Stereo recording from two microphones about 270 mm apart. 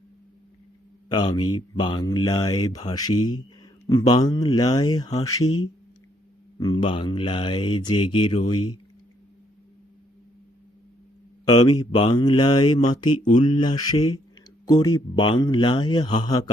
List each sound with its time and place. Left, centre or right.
1.1 s speech: centre
6.6 s speech: centre
8.5 s speech: left
11.4 s speech: centre